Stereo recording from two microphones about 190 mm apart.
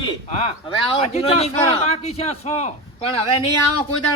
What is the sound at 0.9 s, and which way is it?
A man's voice, 30° left (ahead or behind).